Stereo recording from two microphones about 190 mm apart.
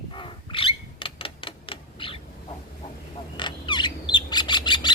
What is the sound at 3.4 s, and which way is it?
Bird, 25° left (ahead or behind).